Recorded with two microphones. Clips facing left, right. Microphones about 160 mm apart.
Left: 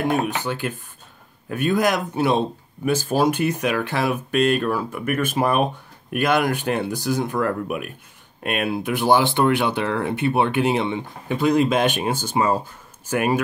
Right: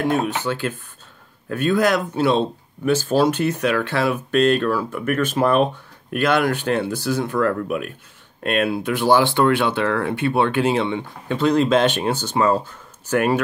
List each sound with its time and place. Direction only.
0.0 s speech: 15° left (ahead or behind)